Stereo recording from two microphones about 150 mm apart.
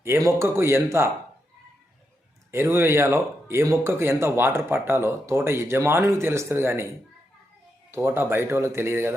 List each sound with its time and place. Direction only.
0.0 s speech: 15° right (ahead or behind)
2.5 s speech: 15° right (ahead or behind)
7.9 s speech: 15° right (ahead or behind)